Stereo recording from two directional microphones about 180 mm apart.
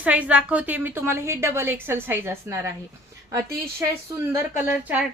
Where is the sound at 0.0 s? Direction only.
5° right (ahead or behind).